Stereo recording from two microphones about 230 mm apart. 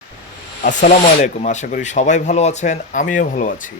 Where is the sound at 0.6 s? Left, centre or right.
Left.